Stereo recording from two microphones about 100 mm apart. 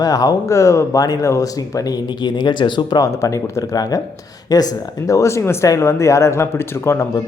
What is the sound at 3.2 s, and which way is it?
Speech, 30° left (ahead or behind).